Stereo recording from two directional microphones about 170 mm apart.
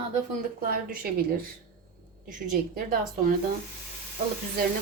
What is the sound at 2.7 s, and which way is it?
Speech, 55° right (ahead or behind).